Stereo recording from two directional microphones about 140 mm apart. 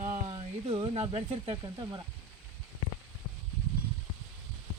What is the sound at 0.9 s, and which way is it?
Speech, 45° right (ahead or behind).